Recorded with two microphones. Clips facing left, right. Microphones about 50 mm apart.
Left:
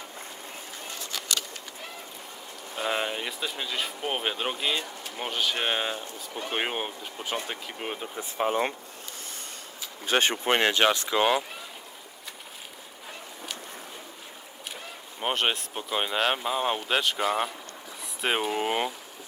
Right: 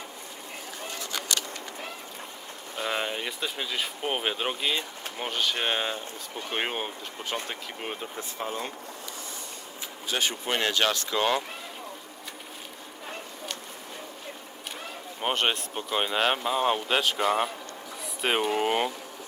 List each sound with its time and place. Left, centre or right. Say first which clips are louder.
2.8 s speech: left 1 dB; centre
8.2 s speech: left 9 dB; left
10.1 s speech: left 5 dB; left; by 11.4 s centre
15.2 s speech: even; centre